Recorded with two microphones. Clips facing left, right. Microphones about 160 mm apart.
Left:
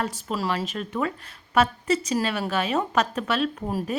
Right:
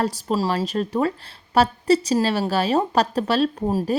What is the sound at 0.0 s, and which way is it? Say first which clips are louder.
A woman's voice: right 5 dB; 35° right (ahead or behind).